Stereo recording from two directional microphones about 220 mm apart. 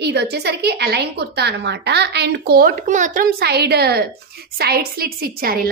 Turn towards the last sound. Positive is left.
turn(degrees=-40)  # may be behind; listen again after turning